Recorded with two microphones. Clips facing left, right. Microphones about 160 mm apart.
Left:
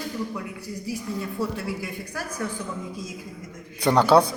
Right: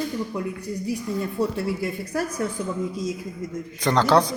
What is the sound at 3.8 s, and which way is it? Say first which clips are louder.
Speech: left 1 dB; 10° left (ahead or behind).